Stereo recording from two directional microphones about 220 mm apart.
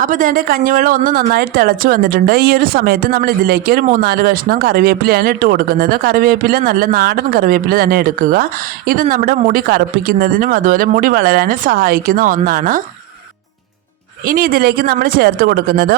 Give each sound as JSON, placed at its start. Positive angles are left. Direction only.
{"t": 0.0, "sound": "speech", "side_deg": -35}
{"t": 14.3, "sound": "speech", "side_deg": -40}